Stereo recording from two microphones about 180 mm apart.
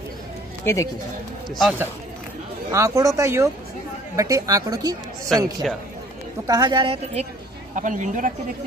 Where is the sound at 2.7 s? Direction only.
20° right (ahead or behind).